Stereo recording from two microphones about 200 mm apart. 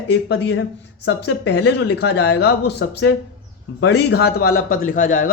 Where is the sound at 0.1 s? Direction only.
60° left (ahead or behind).